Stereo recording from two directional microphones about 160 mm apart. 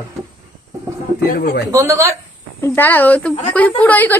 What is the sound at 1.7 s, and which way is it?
Speech, 20° right (ahead or behind).